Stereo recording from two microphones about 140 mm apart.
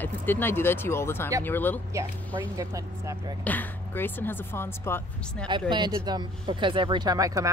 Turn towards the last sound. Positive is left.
turn(degrees=-25)  # may be behind; listen again after turning